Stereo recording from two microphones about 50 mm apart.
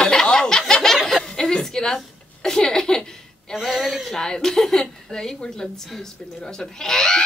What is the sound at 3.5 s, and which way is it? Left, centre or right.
A woman's voice, centre.